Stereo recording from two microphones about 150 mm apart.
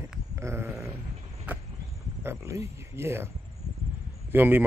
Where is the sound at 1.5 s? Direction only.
10° right (ahead or behind).